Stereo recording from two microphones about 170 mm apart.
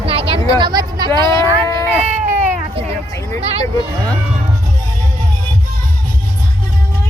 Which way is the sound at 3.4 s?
35° right (ahead or behind).